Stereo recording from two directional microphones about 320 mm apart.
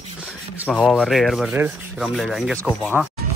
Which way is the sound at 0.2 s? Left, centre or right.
Centre.